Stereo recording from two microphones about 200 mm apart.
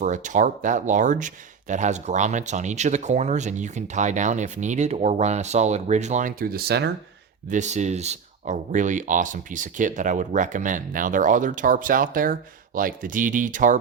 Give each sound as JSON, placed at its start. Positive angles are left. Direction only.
{"t": 0.0, "sound": "speech", "side_deg": -40}
{"t": 7.5, "sound": "speech", "side_deg": -35}